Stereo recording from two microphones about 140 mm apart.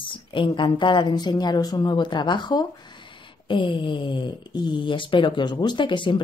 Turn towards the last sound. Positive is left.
turn(degrees=35)  # may be behind; listen again after turning